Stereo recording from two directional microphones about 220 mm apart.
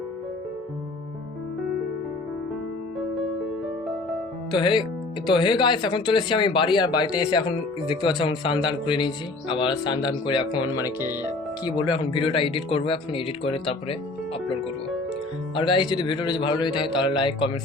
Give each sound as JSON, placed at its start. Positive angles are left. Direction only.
{"t": 4.5, "sound": "speech", "side_deg": 20}
{"t": 15.5, "sound": "speech", "side_deg": 20}